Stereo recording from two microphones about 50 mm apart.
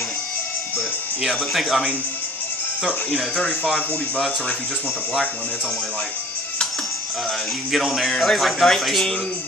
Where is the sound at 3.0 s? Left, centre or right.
Left.